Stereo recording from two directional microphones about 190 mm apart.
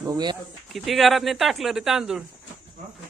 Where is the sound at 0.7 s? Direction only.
Centre (ahead or behind).